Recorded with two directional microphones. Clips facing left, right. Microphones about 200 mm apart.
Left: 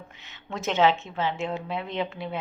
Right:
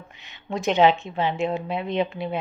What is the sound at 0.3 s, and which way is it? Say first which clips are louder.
A woman's voice: right 5 dB; 15° right (ahead or behind).